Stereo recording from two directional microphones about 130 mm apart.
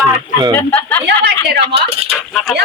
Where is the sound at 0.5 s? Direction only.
15° left (ahead or behind).